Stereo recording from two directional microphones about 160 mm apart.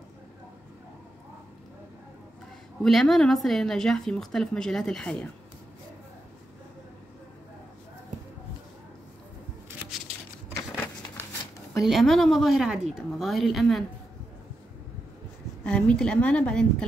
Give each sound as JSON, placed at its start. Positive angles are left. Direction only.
{"t": 2.8, "sound": "a woman's voice", "side_deg": 0}
{"t": 10.8, "sound": "a sound", "side_deg": 15}
{"t": 11.8, "sound": "a woman's voice", "side_deg": 0}
{"t": 15.6, "sound": "a woman's voice", "side_deg": 5}